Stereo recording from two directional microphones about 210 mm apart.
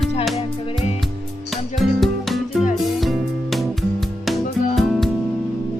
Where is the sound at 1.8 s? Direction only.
Centre (ahead or behind).